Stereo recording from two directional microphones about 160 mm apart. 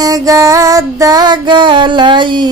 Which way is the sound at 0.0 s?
20° right (ahead or behind).